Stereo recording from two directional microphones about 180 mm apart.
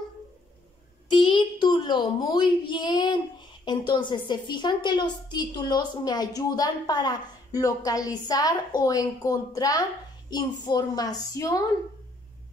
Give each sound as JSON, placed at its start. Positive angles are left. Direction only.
{"t": 1.1, "sound": "a woman's voice", "side_deg": 25}